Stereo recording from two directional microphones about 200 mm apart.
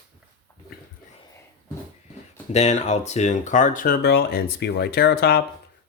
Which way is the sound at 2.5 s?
35° left (ahead or behind).